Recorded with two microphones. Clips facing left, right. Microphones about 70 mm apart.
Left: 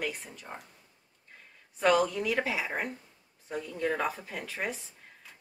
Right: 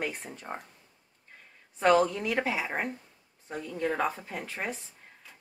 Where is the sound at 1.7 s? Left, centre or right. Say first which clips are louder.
Right 2 dB; right.